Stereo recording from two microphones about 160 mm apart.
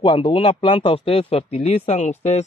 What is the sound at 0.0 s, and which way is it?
Speech, 35° left (ahead or behind).